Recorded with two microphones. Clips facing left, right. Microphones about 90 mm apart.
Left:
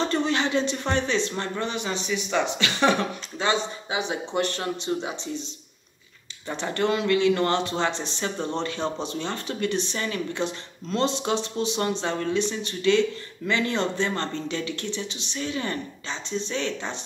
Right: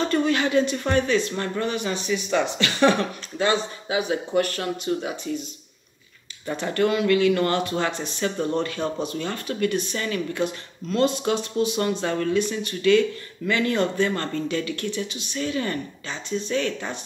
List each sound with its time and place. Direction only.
0.0 s speech: 30° left (ahead or behind)
6.6 s speech: 25° left (ahead or behind)